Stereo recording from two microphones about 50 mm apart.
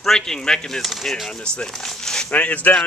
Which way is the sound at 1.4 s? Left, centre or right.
Centre.